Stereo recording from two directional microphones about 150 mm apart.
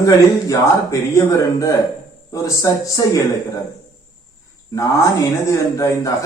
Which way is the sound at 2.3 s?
20° left (ahead or behind).